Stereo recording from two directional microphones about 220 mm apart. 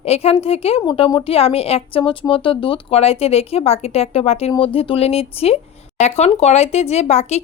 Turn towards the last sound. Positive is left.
turn(degrees=30)  # may be behind; listen again after turning